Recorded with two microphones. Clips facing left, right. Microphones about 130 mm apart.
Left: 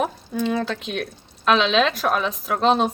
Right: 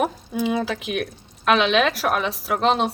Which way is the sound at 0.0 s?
10° right (ahead or behind).